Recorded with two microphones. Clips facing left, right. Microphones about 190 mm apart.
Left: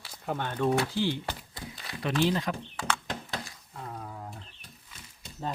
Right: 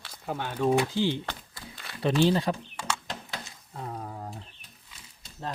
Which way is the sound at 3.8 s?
35° right (ahead or behind).